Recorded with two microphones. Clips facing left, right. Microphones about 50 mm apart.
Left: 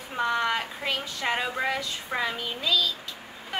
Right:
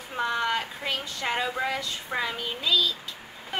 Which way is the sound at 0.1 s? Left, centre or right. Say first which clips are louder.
Left 1 dB; centre.